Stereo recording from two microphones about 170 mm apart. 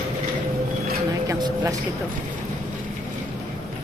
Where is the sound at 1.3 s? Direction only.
20° right (ahead or behind).